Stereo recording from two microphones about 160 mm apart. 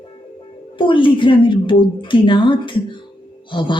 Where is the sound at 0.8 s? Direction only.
30° left (ahead or behind).